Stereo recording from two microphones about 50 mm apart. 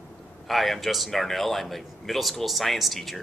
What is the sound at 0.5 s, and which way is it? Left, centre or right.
Speech, centre.